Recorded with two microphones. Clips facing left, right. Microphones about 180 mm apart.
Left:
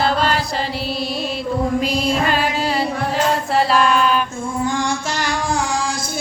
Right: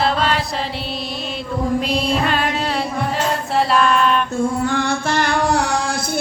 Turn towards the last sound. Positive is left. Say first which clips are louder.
# right 3 dB
turn(degrees=-65)  # may be behind; listen again after turning